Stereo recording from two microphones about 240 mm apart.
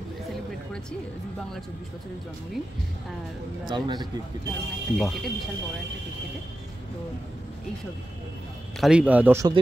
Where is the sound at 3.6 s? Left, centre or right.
Centre.